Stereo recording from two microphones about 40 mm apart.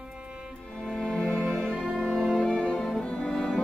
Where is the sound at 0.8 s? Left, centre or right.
Centre.